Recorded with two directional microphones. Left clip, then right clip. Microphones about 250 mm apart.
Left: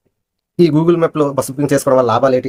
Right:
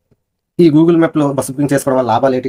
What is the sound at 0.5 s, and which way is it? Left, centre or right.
Speech, centre.